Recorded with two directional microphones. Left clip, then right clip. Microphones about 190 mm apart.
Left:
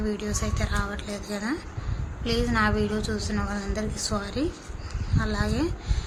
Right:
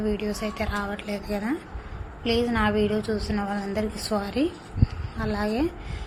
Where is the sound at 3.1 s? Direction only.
10° right (ahead or behind).